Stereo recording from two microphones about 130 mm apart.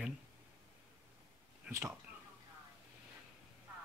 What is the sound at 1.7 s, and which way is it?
Speech, 20° right (ahead or behind).